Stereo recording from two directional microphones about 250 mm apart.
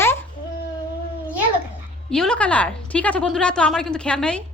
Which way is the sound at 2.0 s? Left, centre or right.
Centre.